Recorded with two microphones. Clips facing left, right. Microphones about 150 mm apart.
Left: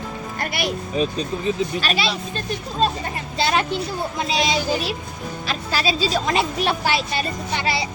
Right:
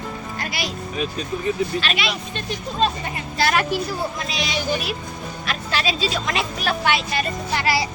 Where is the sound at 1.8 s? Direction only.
35° left (ahead or behind).